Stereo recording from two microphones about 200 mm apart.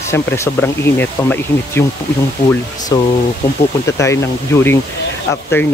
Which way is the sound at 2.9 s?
15° left (ahead or behind).